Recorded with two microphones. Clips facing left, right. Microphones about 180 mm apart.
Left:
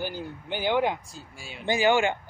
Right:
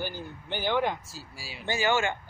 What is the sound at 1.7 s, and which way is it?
Speech, 15° left (ahead or behind).